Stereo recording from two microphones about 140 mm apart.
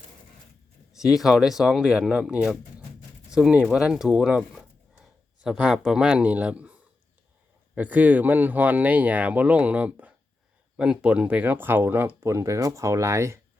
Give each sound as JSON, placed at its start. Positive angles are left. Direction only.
{"t": 0.9, "sound": "a man's voice", "side_deg": -5}